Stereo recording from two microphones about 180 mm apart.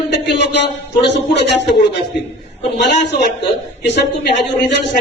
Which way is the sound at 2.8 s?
70° left (ahead or behind).